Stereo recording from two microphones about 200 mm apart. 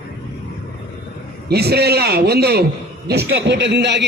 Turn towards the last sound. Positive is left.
turn(degrees=-60)  # may be behind; listen again after turning